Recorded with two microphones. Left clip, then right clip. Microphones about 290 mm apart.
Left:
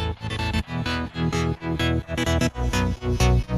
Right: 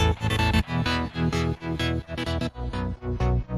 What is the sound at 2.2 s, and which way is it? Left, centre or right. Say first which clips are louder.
Music: left 7 dB; left.